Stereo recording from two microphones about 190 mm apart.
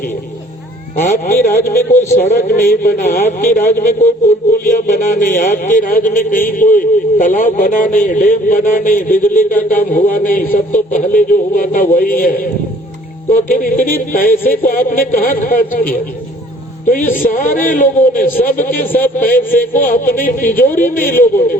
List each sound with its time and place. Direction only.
1.0 s a man's voice: 45° left (ahead or behind)
10.3 s a man's voice: 10° left (ahead or behind)
11.0 s a man's voice: 45° left (ahead or behind)